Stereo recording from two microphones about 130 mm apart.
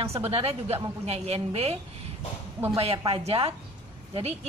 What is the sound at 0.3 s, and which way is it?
A woman's voice, 50° right (ahead or behind).